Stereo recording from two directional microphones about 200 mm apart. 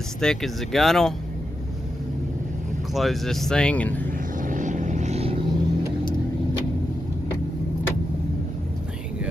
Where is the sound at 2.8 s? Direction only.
Centre (ahead or behind).